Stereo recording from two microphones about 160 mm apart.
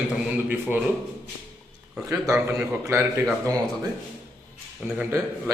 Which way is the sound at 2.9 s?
15° right (ahead or behind).